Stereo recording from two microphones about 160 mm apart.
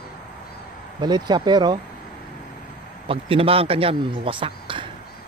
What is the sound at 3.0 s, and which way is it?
A man's voice, 35° right (ahead or behind).